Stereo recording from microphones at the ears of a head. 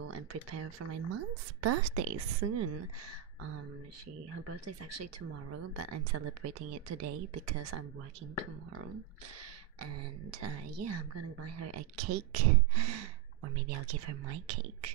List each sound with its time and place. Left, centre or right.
0.1 s a woman's voice: right
5.0 s a woman's voice: right
10.4 s a woman's voice: right